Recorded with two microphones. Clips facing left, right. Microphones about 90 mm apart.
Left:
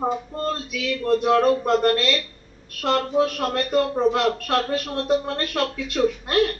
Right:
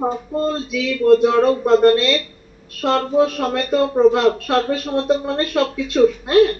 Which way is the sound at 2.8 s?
25° right (ahead or behind).